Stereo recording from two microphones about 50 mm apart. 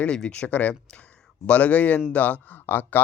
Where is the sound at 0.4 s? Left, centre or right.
Left.